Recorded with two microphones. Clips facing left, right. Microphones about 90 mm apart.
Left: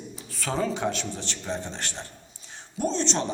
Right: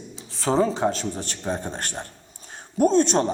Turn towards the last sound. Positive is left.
turn(degrees=-45)  # may be behind; listen again after turning